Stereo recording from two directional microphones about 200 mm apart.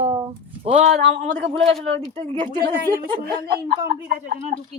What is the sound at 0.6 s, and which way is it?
Speech, 35° right (ahead or behind).